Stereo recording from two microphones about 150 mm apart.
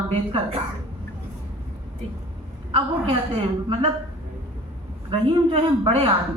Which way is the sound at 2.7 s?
40° right (ahead or behind).